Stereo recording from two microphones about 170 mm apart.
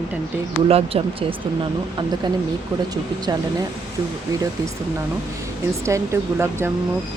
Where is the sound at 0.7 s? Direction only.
35° right (ahead or behind).